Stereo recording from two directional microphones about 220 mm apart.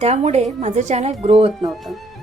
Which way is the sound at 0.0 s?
30° right (ahead or behind).